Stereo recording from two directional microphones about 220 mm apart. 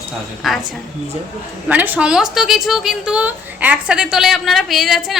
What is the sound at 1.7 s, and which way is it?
A woman's voice, 5° right (ahead or behind).